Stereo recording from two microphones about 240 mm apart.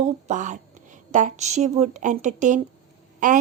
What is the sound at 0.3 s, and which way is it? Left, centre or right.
A woman's voice, right.